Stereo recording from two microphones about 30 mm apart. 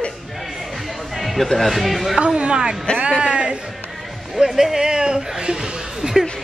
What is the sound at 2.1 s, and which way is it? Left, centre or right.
Speech, right.